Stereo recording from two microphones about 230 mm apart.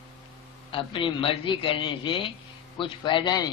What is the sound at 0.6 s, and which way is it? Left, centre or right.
Speech, left.